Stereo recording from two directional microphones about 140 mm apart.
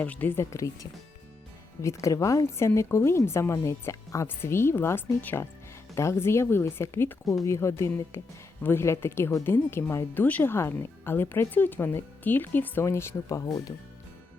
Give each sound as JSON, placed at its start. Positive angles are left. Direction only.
{"t": 0.0, "sound": "a woman's voice", "side_deg": 10}